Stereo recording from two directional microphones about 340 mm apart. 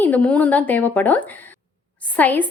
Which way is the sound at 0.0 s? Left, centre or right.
Centre.